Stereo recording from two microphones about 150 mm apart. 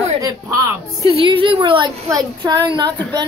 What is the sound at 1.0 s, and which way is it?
A child's voice, 35° right (ahead or behind).